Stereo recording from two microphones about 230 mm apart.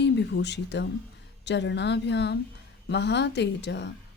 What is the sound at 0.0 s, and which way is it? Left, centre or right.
Speech, left.